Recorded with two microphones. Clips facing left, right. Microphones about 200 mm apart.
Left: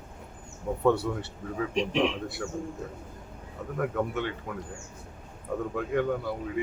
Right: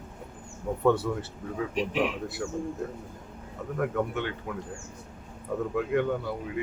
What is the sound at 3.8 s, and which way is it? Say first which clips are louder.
Speech: even; centre (ahead or behind).